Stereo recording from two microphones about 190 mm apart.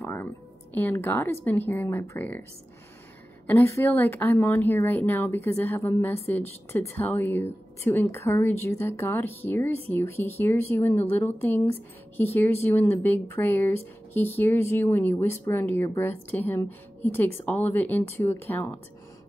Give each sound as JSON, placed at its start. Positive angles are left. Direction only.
{"t": 0.0, "sound": "music", "side_deg": 10}
{"t": 0.7, "sound": "speech", "side_deg": 10}
{"t": 3.4, "sound": "speech", "side_deg": 10}